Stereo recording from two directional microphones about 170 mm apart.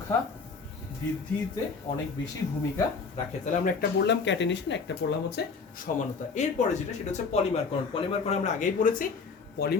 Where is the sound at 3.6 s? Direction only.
70° left (ahead or behind).